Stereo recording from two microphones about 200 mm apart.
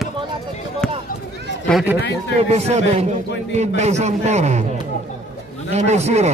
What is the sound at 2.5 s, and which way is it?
A man's voice, 35° right (ahead or behind).